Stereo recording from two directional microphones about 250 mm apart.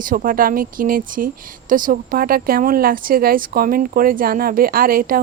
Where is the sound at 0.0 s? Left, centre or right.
Right.